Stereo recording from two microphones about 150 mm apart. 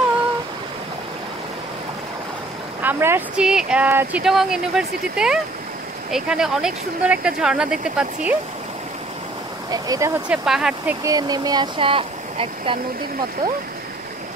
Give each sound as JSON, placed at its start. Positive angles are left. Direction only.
{"t": 2.8, "sound": "speech", "side_deg": -15}
{"t": 9.7, "sound": "speech", "side_deg": -25}
{"t": 10.2, "sound": "speech", "side_deg": -5}
{"t": 11.1, "sound": "speech", "side_deg": -25}